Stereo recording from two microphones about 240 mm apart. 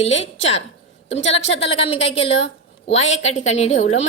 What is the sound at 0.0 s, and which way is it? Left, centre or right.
A woman's voice, left.